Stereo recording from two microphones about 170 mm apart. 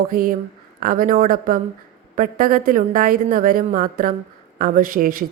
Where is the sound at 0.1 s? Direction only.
55° right (ahead or behind).